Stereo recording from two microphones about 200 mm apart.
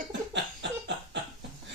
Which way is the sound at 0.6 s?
60° right (ahead or behind).